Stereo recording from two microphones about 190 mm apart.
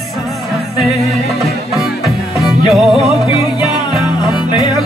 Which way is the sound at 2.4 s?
Centre (ahead or behind).